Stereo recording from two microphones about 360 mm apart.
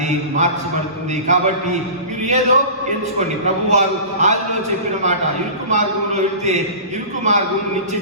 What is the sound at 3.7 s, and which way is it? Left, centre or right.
Speech, centre.